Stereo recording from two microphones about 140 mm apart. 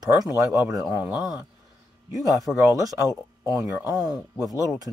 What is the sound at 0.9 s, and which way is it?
Speech, 10° right (ahead or behind).